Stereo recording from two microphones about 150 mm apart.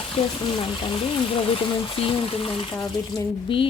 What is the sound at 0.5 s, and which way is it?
A woman's voice, 35° left (ahead or behind).